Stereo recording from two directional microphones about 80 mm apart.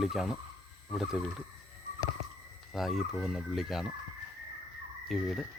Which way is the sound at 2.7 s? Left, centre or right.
Centre.